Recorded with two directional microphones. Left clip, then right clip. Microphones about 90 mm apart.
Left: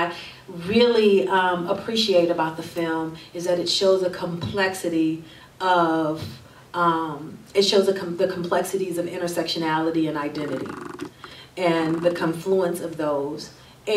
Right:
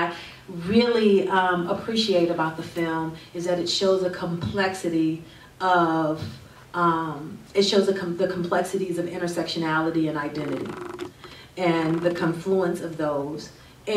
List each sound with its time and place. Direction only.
0.1 s speech: 25° left (ahead or behind)
11.5 s speech: 20° left (ahead or behind)